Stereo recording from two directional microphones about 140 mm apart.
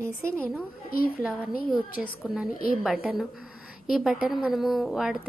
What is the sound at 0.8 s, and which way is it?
Speech, 90° left.